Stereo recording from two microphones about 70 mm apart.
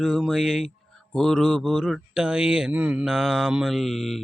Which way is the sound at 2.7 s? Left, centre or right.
Right.